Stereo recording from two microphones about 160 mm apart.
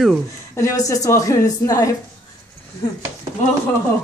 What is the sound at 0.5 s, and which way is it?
A woman's voice, 20° left (ahead or behind).